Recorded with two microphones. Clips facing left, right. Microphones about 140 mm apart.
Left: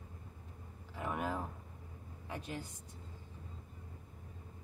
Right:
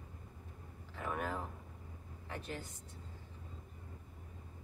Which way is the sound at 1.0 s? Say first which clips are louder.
Left 1 dB; 15° left (ahead or behind).